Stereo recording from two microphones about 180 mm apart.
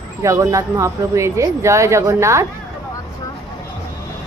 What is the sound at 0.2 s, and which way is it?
Speech, 15° right (ahead or behind).